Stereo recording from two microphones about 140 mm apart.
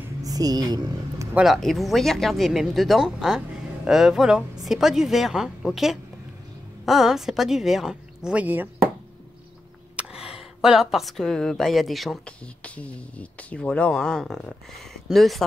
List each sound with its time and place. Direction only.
0.2 s a sound: 25° right (ahead or behind)
1.3 s speech: centre (ahead or behind)
9.9 s speech: 5° right (ahead or behind)